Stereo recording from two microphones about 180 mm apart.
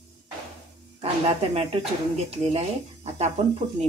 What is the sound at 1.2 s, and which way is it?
Speech, 35° right (ahead or behind).